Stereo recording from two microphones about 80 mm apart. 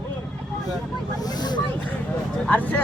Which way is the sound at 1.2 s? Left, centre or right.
Left.